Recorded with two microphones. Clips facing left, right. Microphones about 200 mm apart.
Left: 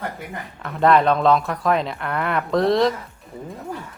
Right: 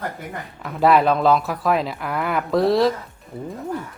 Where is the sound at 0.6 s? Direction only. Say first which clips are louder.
Even; 5° right (ahead or behind).